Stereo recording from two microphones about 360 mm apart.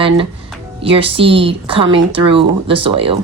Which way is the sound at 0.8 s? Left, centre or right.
Centre.